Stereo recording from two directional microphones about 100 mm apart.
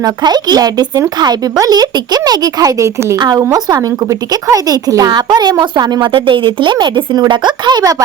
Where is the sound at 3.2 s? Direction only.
45° right (ahead or behind).